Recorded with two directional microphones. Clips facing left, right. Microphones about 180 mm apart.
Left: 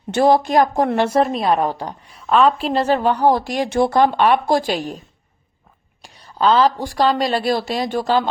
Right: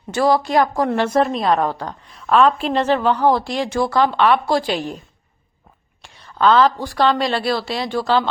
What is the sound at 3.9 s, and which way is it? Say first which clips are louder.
Speech: even; 50° left (ahead or behind).